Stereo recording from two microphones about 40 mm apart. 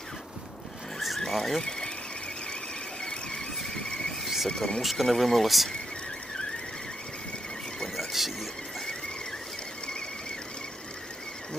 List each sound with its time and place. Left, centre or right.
0.9 s vehicle: centre
1.3 s speech: centre
3.0 s squeal: centre
4.4 s speech: centre
4.8 s speech: centre
7.9 s squeal: centre